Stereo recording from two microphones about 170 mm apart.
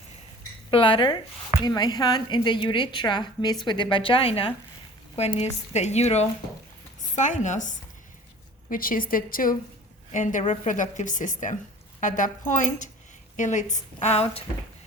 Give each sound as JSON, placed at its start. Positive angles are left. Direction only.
{"t": 0.7, "sound": "a woman's voice", "side_deg": 30}